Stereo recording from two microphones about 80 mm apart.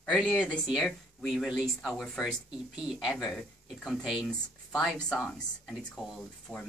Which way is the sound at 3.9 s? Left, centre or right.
Centre.